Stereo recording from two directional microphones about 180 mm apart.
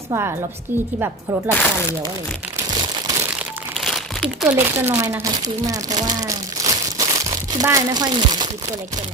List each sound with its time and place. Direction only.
0.1 s speech: 15° right (ahead or behind)
1.5 s speech: 15° left (ahead or behind)
2.6 s crumpling: 25° right (ahead or behind)
3.3 s crumpling: centre (ahead or behind)
4.5 s speech: 10° right (ahead or behind)